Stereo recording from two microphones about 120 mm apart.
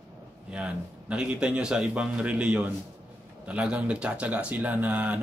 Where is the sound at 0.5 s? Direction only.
10° right (ahead or behind).